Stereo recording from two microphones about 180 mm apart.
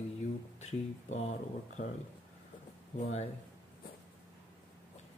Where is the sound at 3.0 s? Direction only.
40° left (ahead or behind).